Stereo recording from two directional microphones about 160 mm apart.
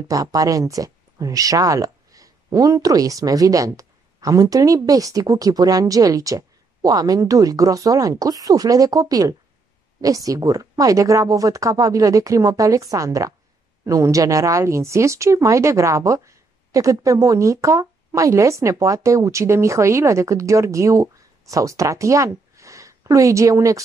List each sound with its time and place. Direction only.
0.1 s speech: 20° right (ahead or behind)